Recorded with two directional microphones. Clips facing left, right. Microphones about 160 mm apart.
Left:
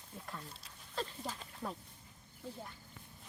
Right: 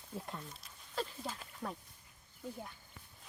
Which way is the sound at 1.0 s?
5° right (ahead or behind).